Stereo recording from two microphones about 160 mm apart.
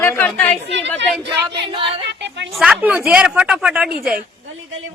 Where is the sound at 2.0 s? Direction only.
90° right.